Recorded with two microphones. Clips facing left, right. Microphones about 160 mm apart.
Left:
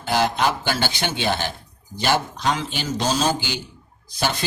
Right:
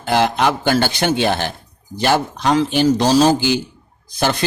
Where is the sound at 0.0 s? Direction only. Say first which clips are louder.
Right 4 dB; 60° right (ahead or behind).